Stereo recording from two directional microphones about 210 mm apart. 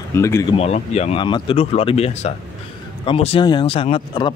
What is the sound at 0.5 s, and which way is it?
Speech, 30° left (ahead or behind).